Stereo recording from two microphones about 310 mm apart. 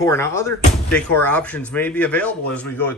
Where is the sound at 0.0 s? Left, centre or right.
Centre.